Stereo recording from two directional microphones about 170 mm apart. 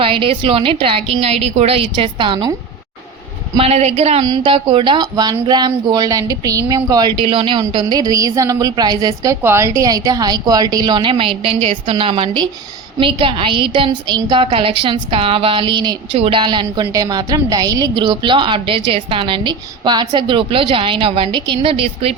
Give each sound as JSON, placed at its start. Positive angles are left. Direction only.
{"t": 0.0, "sound": "a woman's voice", "side_deg": -30}
{"t": 3.6, "sound": "a woman's voice", "side_deg": -40}
{"t": 4.2, "sound": "a woman's voice", "side_deg": -25}